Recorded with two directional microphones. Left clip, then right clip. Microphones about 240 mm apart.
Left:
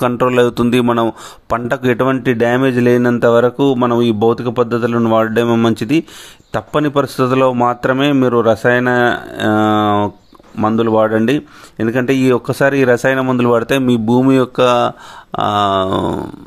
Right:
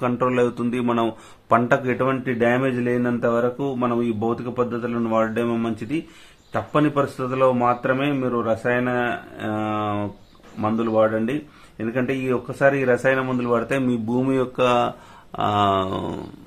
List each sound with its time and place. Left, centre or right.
0.0 s speech: left